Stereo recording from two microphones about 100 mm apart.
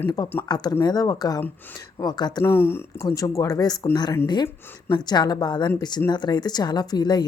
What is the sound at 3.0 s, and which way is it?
Speech, 35° left (ahead or behind).